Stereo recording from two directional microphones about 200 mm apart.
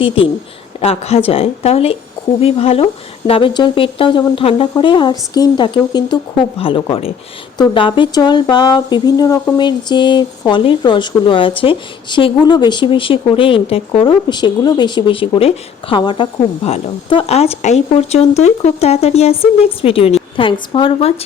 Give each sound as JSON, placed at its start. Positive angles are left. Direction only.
{"t": 0.8, "sound": "speech", "side_deg": 30}